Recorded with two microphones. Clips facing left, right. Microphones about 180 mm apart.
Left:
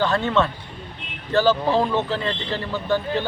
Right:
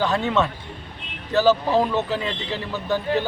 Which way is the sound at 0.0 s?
5° right (ahead or behind).